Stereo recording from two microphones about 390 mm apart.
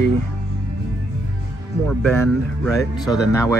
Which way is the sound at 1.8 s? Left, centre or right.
Centre.